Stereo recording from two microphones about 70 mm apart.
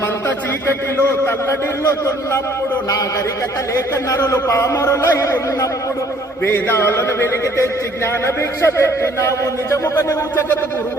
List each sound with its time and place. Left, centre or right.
0.7 s speech: left
4.1 s a man's voice: left
6.4 s a man's voice: left